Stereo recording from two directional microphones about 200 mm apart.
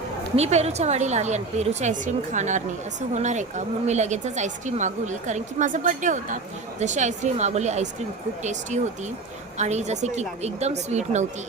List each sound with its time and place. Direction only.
0.3 s speech: 30° right (ahead or behind)